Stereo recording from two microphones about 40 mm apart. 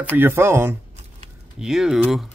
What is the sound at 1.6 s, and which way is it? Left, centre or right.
Speech, centre.